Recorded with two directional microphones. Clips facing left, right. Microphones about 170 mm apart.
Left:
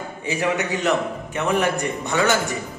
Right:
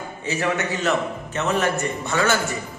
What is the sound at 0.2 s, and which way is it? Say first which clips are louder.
A man's voice: left 1 dB; 15° left (ahead or behind).